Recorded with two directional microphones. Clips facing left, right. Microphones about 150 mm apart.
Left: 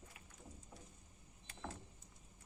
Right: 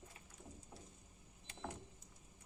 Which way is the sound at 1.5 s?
15° right (ahead or behind).